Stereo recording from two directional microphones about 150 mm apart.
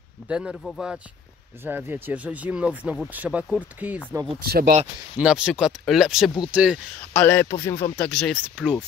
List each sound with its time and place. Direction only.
0.3 s speech: 5° right (ahead or behind)
4.4 s speech: 85° right
5.1 s speech: 5° right (ahead or behind)
7.2 s a man's voice: 15° left (ahead or behind)
7.9 s speech: 5° left (ahead or behind)